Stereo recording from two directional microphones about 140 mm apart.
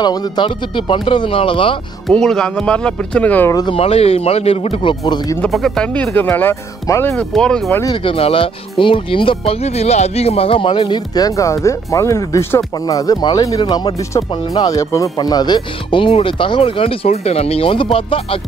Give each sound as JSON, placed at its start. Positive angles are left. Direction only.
{"t": 0.0, "sound": "speech", "side_deg": 30}
{"t": 2.0, "sound": "speech", "side_deg": 5}
{"t": 3.7, "sound": "speech", "side_deg": 45}
{"t": 5.4, "sound": "speech", "side_deg": 5}
{"t": 7.3, "sound": "speech", "side_deg": 5}
{"t": 7.8, "sound": "speech", "side_deg": 35}